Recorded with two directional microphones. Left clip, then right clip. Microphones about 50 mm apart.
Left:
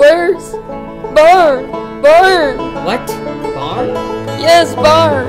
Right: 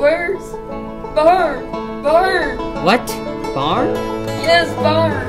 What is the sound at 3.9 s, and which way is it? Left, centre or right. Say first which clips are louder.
Music: left 2 dB; right.